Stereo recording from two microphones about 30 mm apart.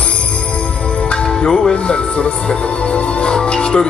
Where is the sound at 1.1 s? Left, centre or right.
Left.